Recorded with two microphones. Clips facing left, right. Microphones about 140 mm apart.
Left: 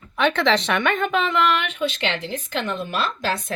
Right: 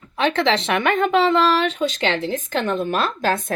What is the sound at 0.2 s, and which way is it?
A woman's voice, 25° right (ahead or behind).